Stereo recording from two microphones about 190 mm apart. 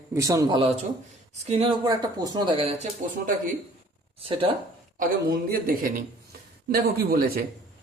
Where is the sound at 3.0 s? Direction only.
40° right (ahead or behind).